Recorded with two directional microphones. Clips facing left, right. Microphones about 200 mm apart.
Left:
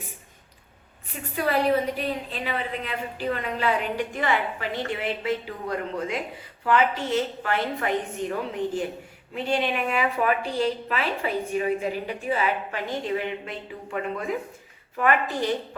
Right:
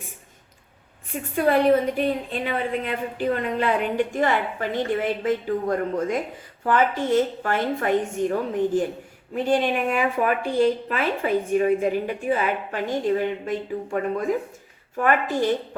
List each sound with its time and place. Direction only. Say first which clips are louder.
1.1 s speech: right 5 dB; 50° right (ahead or behind)